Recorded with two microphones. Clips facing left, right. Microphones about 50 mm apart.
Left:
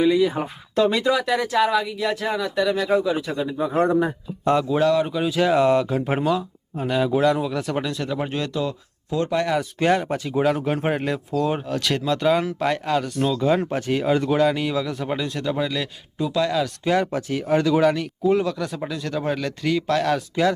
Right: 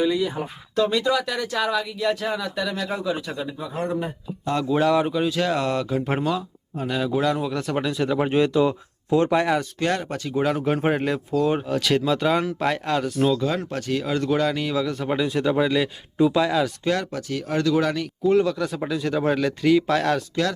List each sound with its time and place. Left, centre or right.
1.0 s speech: centre
3.6 s a man's voice: left
4.9 s speech: centre
5.1 s speech: centre
9.7 s speech: centre
10.4 s speech: centre
13.6 s speech: left; by 16.7 s centre
16.8 s speech: centre